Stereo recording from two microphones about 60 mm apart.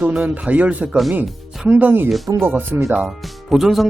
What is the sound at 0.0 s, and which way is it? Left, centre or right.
Speech, centre.